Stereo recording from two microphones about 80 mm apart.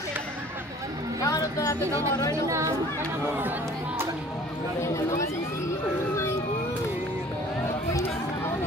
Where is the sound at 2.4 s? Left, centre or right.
Right.